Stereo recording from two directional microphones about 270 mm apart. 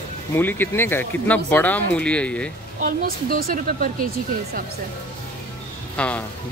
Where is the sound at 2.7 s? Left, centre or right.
Right.